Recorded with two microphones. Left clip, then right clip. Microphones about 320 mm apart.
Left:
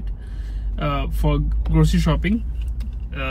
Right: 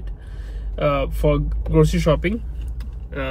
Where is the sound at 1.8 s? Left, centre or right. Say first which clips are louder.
Right 4 dB; centre.